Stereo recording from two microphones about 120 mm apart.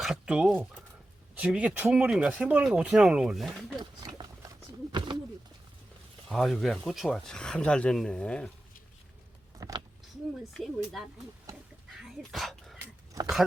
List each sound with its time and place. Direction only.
0.0 s speech: 5° right (ahead or behind)
3.8 s a sound: 35° right (ahead or behind)
6.2 s speech: centre (ahead or behind)
9.6 s speech: 30° right (ahead or behind)
10.5 s speech: centre (ahead or behind)
11.9 s dog: centre (ahead or behind)